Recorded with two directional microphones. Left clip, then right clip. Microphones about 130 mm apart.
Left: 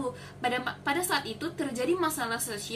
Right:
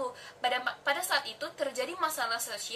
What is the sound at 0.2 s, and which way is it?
A woman's voice, 15° right (ahead or behind).